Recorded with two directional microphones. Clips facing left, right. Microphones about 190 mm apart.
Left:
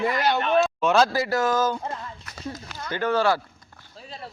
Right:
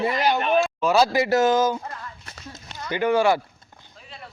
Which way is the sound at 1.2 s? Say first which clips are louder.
Right 4 dB; 25° right (ahead or behind).